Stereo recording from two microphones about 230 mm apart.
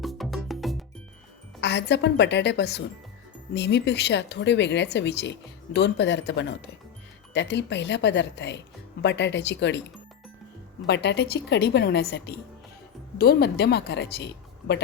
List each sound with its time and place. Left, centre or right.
0.0 s music: centre
1.6 s speech: left
10.8 s speech: left